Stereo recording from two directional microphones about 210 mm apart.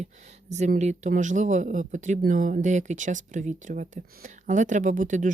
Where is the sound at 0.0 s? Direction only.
35° right (ahead or behind).